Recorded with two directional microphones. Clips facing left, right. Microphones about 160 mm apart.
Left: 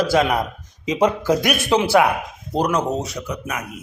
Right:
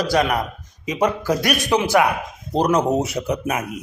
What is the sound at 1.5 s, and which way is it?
Speech, 15° right (ahead or behind).